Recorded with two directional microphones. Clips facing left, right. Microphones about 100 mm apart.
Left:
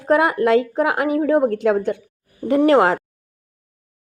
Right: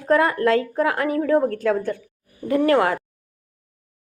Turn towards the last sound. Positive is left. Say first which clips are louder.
# left 4 dB
turn(degrees=25)  # may be behind; listen again after turning